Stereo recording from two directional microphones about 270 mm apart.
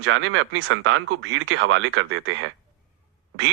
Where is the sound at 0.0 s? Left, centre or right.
Right.